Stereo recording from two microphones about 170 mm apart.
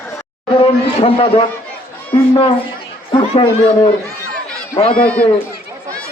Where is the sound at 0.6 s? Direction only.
30° left (ahead or behind).